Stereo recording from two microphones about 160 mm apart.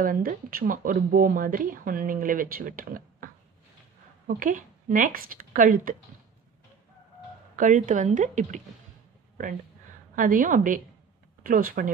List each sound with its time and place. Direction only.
0.0 s speech: 60° right (ahead or behind)
4.3 s speech: 60° right (ahead or behind)
7.5 s a woman's voice: 55° right (ahead or behind)
10.1 s speech: 60° right (ahead or behind)